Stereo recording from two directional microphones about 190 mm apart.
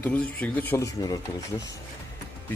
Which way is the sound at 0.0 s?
5° left (ahead or behind).